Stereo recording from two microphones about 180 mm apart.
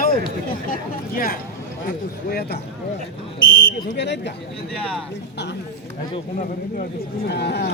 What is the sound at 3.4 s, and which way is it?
Speech, 55° left (ahead or behind).